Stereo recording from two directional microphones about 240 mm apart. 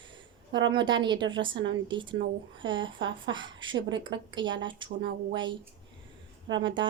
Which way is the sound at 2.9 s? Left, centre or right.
Right.